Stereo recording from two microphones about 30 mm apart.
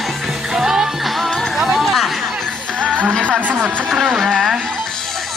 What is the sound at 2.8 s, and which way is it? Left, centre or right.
Music, right.